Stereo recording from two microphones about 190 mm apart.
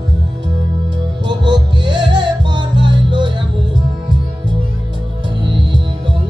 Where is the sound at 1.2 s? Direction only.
25° right (ahead or behind).